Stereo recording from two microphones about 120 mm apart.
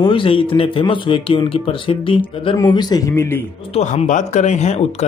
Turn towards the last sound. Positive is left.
turn(degrees=75)  # may be behind; listen again after turning